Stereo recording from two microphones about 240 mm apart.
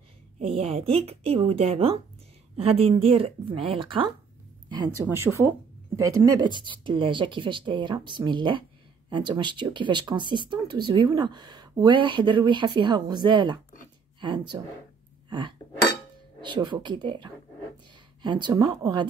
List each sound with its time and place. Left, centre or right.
0.6 s speech: right